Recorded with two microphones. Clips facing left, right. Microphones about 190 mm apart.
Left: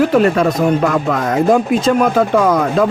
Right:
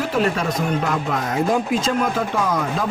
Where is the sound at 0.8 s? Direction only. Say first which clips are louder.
Left 7 dB; 70° left (ahead or behind).